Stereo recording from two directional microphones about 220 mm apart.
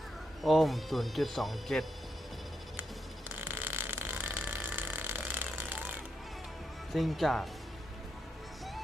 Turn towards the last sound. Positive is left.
turn(degrees=0)  # may be behind; listen again after turning